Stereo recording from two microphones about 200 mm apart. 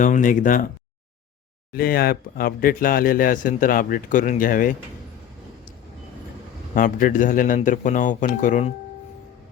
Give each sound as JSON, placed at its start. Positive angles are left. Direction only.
{"t": 0.0, "sound": "speech", "side_deg": 40}
{"t": 1.7, "sound": "speech", "side_deg": 50}
{"t": 6.7, "sound": "speech", "side_deg": 45}